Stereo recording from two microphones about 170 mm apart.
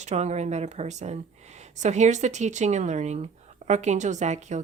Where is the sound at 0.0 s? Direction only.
40° right (ahead or behind).